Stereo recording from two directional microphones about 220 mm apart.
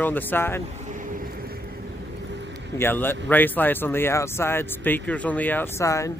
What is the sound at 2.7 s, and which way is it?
Speech, 10° left (ahead or behind).